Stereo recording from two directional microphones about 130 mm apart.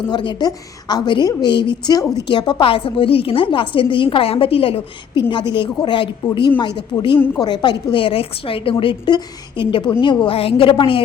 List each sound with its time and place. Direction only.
0.1 s a woman's voice: 35° left (ahead or behind)
5.3 s a woman's voice: 35° left (ahead or behind)